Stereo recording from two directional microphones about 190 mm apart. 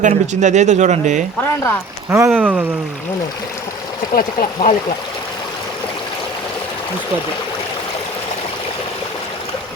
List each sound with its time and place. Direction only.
0.0 s speech: 40° right (ahead or behind)
2.0 s speech: 10° right (ahead or behind)
4.1 s speech: 45° left (ahead or behind)